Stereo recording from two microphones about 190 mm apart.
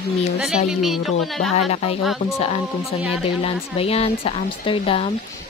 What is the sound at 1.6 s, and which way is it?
Speech, 35° left (ahead or behind).